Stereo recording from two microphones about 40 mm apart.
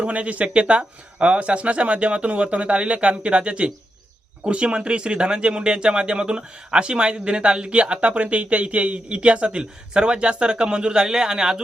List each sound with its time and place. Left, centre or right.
0.0 s speech: right; by 11.6 s centre